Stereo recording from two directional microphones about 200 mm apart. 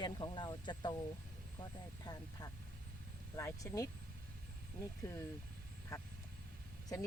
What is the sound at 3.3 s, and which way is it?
Speech, 15° left (ahead or behind).